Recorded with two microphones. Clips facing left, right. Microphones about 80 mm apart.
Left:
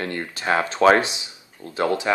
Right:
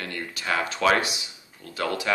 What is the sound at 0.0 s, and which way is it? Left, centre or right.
Speech, left.